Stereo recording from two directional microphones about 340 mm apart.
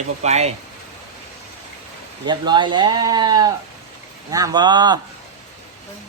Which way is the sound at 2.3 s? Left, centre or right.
Centre.